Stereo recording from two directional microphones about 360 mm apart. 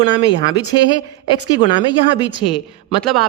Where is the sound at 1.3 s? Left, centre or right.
Centre.